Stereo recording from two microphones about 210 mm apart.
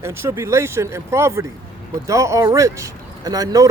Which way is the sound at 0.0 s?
10° right (ahead or behind).